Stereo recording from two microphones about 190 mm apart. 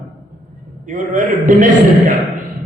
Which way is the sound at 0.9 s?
45° right (ahead or behind).